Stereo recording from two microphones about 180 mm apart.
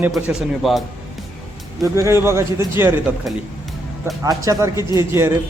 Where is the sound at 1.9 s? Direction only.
15° right (ahead or behind).